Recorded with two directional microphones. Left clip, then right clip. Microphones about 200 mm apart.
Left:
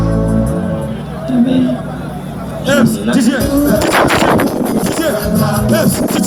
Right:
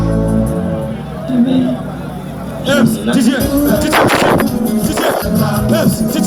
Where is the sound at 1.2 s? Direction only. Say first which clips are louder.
Left 1 dB; 40° left (ahead or behind).